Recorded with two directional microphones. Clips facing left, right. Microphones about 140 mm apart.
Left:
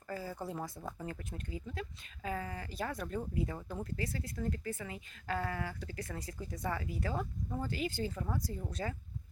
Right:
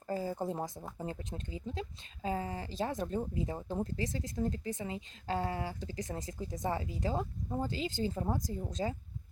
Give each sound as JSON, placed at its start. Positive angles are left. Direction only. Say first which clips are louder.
{"t": 0.1, "sound": "speech", "louder": "right 5 dB", "side_deg": -25}
{"t": 8.4, "sound": "speech", "louder": "right 3 dB", "side_deg": -20}